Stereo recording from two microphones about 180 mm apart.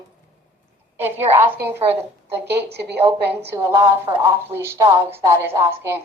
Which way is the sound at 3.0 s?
10° right (ahead or behind).